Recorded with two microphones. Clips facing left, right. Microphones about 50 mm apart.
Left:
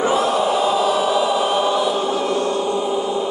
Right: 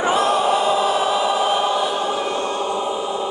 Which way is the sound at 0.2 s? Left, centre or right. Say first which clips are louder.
Even; right.